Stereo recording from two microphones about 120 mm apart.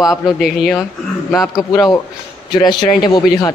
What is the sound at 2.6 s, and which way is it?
Speech, 35° left (ahead or behind).